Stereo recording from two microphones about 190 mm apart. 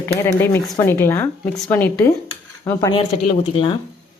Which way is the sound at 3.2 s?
30° left (ahead or behind).